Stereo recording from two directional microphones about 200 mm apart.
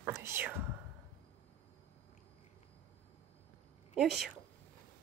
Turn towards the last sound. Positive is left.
turn(degrees=0)  # may be behind; listen again after turning